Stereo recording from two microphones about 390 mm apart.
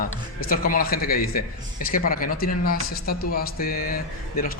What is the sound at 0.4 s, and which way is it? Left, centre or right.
Speech, left.